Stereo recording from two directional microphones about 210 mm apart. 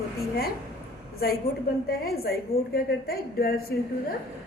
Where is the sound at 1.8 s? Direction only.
45° left (ahead or behind).